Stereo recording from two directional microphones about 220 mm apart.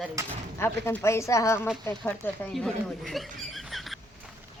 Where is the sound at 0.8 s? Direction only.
10° left (ahead or behind).